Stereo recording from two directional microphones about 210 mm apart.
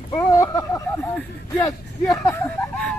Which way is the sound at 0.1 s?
15° left (ahead or behind).